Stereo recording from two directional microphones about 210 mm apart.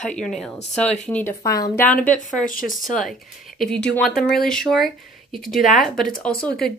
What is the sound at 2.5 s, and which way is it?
Speech, 40° left (ahead or behind).